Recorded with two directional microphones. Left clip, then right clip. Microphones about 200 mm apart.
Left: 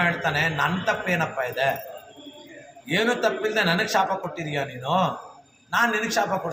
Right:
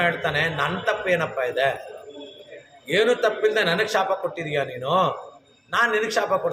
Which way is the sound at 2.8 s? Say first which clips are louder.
Right 3 dB; 20° right (ahead or behind).